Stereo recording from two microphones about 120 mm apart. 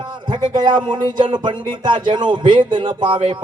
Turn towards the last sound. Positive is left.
turn(degrees=-40)  # may be behind; listen again after turning